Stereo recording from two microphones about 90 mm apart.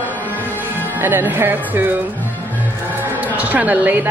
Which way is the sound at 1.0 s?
20° right (ahead or behind).